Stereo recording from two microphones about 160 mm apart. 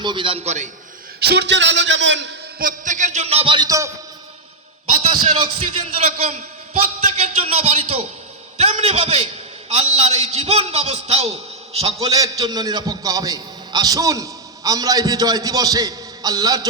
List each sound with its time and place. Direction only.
0.0 s a man's voice: 30° right (ahead or behind); by 0.7 s 45° right (ahead or behind)
1.2 s a man's voice: 90° right; by 3.9 s 20° right (ahead or behind)
5.0 s a man's voice: 45° right (ahead or behind)
11.9 s a man's voice: 20° right (ahead or behind)